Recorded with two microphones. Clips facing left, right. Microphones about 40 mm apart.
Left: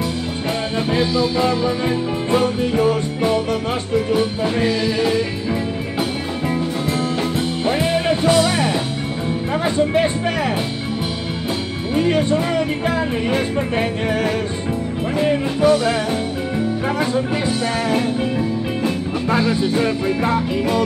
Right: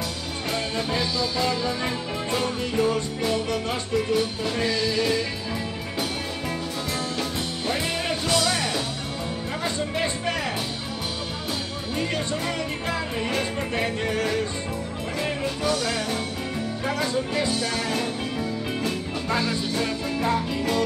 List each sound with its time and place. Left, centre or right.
0.7 s music: left
7.6 s music: left
11.9 s music: left